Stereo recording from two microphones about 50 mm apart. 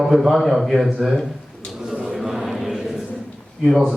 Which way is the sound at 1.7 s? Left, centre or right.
Centre.